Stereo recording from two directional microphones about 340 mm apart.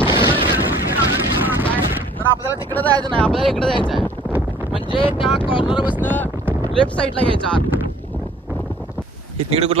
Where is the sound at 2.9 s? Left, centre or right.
Centre.